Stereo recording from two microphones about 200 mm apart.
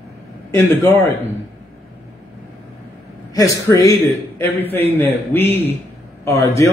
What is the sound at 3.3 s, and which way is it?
Speech, 15° left (ahead or behind).